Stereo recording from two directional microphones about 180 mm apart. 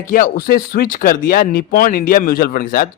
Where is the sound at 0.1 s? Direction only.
50° left (ahead or behind).